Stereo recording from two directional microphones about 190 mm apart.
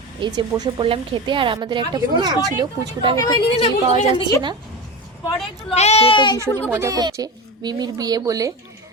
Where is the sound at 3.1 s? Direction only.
20° left (ahead or behind).